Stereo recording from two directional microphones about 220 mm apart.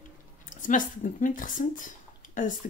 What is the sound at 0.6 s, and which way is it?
Speech, 35° left (ahead or behind).